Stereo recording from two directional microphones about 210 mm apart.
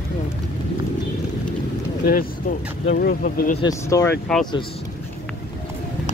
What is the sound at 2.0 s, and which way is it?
Speech, 45° left (ahead or behind).